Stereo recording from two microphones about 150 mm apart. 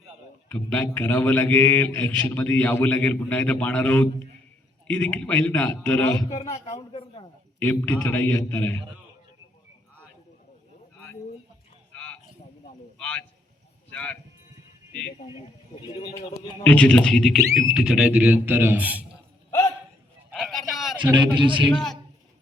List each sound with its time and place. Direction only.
0.4 s a man's voice: 10° left (ahead or behind)
6.5 s a man's voice: 40° left (ahead or behind)
7.6 s a man's voice: 15° left (ahead or behind)
11.9 s a sound: 10° left (ahead or behind)
13.9 s speech: 10° left (ahead or behind)
16.6 s a man's voice: 10° left (ahead or behind); by 19.0 s 10° right (ahead or behind)
19.5 s a sound: 20° left (ahead or behind)
20.3 s vehicle: centre (ahead or behind)
21.0 s a man's voice: 30° right (ahead or behind)
21.7 s a man's voice: 5° left (ahead or behind)